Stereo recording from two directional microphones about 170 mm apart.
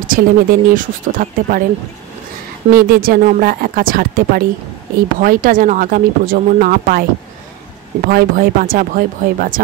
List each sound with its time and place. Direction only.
0.0 s speech: 55° right (ahead or behind)
2.7 s speech: 60° right (ahead or behind)
8.1 s speech: 60° right (ahead or behind)